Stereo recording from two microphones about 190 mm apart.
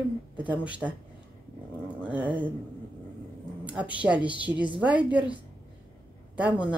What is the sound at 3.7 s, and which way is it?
Speech, 5° right (ahead or behind).